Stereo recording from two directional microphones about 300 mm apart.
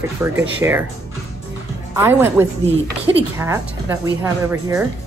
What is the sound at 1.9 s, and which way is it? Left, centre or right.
A woman's voice, centre.